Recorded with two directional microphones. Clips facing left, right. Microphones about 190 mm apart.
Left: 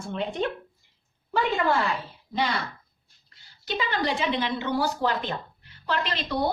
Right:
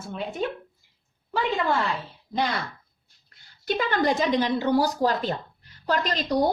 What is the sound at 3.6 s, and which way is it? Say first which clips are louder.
A woman's voice: right 4 dB; 50° right (ahead or behind).